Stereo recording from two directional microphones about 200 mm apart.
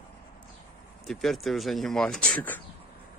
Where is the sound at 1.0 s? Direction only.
Centre (ahead or behind).